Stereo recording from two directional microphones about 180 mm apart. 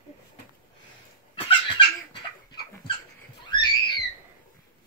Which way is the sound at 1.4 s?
25° left (ahead or behind).